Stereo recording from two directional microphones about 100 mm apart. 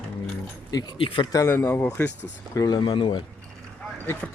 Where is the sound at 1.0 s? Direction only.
60° left (ahead or behind).